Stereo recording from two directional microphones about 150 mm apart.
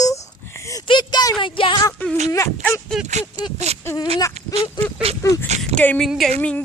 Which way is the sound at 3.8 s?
20° left (ahead or behind).